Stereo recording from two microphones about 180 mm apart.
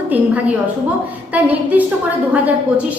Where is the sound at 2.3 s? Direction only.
10° right (ahead or behind).